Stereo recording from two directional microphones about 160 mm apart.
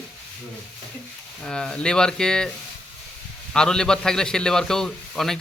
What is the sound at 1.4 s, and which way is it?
Speech, 5° left (ahead or behind).